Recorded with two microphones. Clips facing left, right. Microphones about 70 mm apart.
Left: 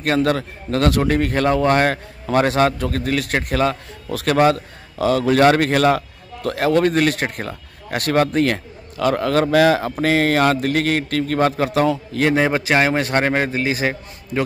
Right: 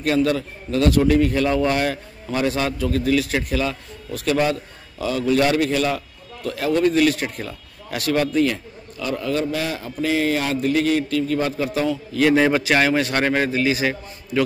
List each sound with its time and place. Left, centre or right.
0.0 s a man's voice: left
1.0 s a man's voice: left
4.1 s speech: left
4.4 s a man's voice: left
12.3 s a man's voice: left